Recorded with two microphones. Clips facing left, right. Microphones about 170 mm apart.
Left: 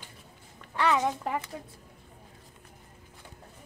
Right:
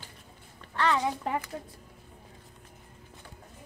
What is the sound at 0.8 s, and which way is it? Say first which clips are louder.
Speech: left 1 dB; 15° left (ahead or behind).